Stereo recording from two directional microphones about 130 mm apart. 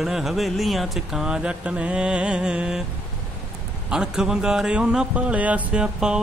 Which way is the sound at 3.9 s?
5° right (ahead or behind).